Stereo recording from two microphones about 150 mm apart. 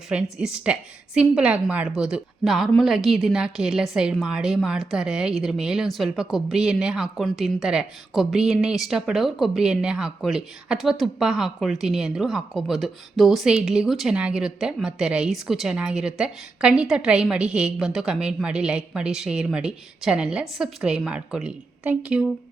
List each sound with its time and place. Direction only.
0.1 s a woman's voice: 5° right (ahead or behind)